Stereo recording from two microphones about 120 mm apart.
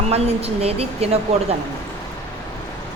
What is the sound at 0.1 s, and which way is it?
A woman's voice, 60° right (ahead or behind).